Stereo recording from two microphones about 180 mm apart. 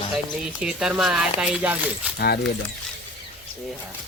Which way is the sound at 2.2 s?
60° left (ahead or behind).